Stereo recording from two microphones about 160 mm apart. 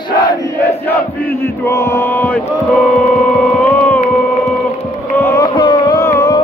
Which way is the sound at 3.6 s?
10° left (ahead or behind).